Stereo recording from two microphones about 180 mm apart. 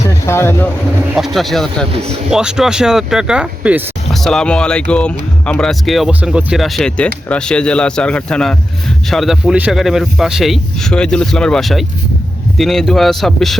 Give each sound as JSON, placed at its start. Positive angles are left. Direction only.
{"t": 0.3, "sound": "speech", "side_deg": 15}
{"t": 1.1, "sound": "speech", "side_deg": 0}
{"t": 1.9, "sound": "speech", "side_deg": -35}
{"t": 2.3, "sound": "speech", "side_deg": -5}